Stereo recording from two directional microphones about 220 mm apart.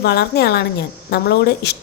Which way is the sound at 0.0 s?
45° left (ahead or behind).